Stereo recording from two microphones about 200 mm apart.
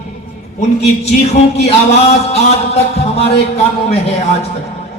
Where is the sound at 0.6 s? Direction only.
35° left (ahead or behind).